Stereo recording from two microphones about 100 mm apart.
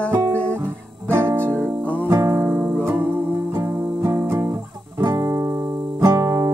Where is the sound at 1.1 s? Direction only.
25° right (ahead or behind).